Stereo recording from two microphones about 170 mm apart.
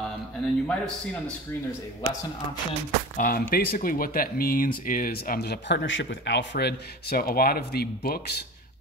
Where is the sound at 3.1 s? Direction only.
55° left (ahead or behind).